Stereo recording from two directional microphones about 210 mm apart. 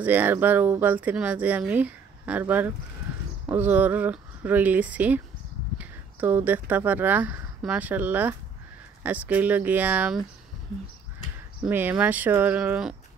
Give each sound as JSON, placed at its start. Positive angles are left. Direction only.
{"t": 0.0, "sound": "speech", "side_deg": -10}
{"t": 11.6, "sound": "speech", "side_deg": -10}